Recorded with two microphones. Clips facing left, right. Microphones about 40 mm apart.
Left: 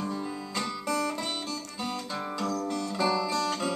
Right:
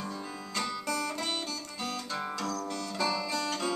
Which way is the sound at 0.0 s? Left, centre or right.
Centre.